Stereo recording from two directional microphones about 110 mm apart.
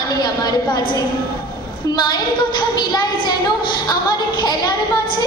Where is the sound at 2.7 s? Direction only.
40° left (ahead or behind).